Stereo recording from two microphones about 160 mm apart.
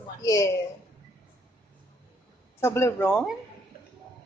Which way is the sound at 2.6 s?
15° left (ahead or behind).